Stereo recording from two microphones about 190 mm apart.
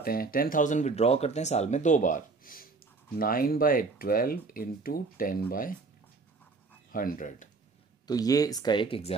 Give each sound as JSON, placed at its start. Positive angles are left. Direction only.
{"t": 0.0, "sound": "speech", "side_deg": 50}
{"t": 6.9, "sound": "speech", "side_deg": 45}
{"t": 8.1, "sound": "speech", "side_deg": 20}